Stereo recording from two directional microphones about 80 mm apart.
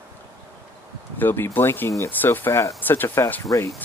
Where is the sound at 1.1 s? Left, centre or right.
Left.